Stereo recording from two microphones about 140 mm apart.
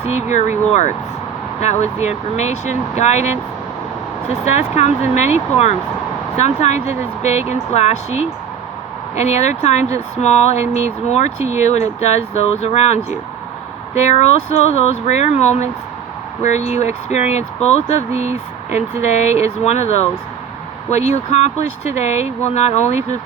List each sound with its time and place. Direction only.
0.1 s speech: 55° left (ahead or behind)
4.4 s speech: 55° left (ahead or behind)